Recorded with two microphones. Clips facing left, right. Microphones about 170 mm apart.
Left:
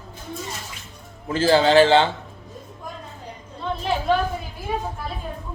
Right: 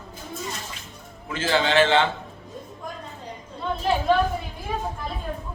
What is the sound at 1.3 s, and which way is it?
Speech, 35° left (ahead or behind).